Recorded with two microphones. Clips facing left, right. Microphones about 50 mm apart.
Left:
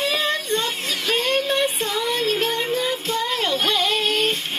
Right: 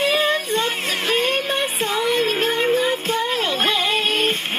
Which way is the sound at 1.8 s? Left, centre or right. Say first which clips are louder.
Right 3 dB; right.